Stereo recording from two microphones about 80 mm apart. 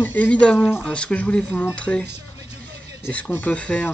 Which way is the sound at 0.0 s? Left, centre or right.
Centre.